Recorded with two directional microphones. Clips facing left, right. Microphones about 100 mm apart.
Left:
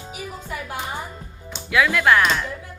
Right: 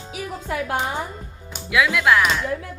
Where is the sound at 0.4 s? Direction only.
90° right.